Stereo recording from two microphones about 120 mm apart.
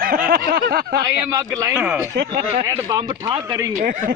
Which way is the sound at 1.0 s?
30° right (ahead or behind).